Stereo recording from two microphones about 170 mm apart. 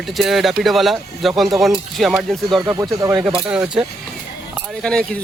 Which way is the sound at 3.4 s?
5° right (ahead or behind).